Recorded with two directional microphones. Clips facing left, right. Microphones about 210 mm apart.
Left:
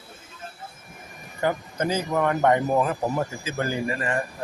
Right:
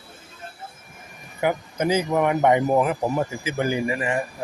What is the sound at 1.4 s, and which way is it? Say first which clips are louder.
Speech: right 2 dB; 10° right (ahead or behind).